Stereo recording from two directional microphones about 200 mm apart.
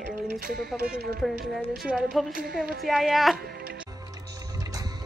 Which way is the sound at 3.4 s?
50° right (ahead or behind).